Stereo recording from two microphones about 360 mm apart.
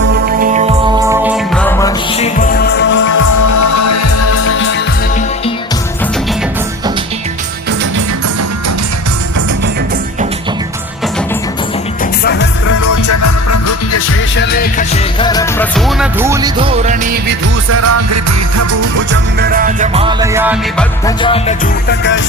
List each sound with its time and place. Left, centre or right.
0.0 s music: right
1.0 s music: centre
2.1 s music: centre
3.1 s music: left
12.2 s music: left
12.6 s music: left
14.3 s music: left
15.2 s music: centre
17.7 s music: right
19.1 s music: right; by 20.8 s centre
21.2 s music: centre
21.8 s music: left